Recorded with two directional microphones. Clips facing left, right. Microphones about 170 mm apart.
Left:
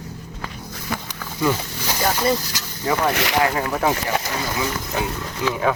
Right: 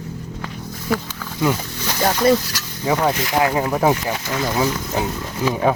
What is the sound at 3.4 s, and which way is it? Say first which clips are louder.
Speech: right 7 dB; 15° right (ahead or behind).